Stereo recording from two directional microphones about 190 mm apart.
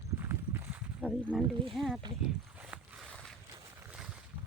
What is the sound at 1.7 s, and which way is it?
Speech, centre (ahead or behind).